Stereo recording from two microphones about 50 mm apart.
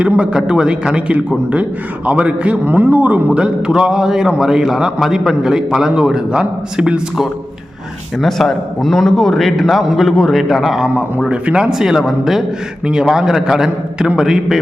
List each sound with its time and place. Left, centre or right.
0.0 s a man's voice: centre
2.6 s speech: right
3.7 s a man's voice: centre
8.2 s a man's voice: centre
11.3 s a man's voice: centre
11.7 s a man's voice: centre